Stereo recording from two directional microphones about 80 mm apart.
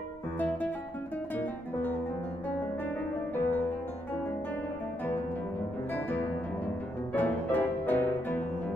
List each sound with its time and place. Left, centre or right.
0.4 s guitar: left
1.3 s music: left
3.3 s music: left
5.9 s music: left